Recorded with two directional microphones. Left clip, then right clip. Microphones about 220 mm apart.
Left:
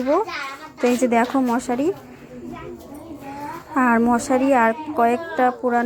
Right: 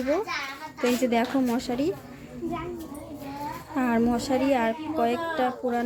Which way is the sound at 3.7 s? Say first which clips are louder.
Left 8 dB; 5° left (ahead or behind).